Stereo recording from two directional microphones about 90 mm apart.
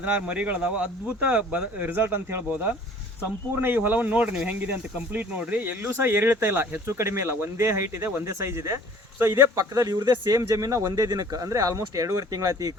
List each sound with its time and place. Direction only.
0.0 s speech: 15° right (ahead or behind); by 12.7 s 40° right (ahead or behind)